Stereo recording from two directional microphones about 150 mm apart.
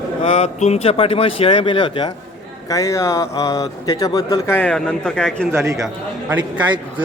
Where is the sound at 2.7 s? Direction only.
20° left (ahead or behind).